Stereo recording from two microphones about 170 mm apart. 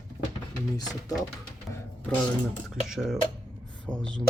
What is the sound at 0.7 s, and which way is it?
Speech, 20° left (ahead or behind).